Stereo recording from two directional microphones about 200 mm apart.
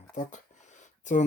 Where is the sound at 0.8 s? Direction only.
40° left (ahead or behind).